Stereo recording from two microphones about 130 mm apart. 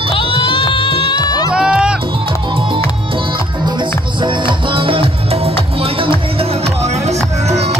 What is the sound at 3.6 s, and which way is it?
Music, 35° right (ahead or behind).